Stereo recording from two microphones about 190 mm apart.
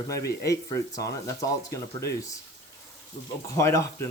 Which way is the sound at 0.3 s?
15° left (ahead or behind).